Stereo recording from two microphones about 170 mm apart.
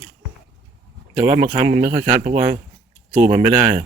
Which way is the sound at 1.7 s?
40° right (ahead or behind).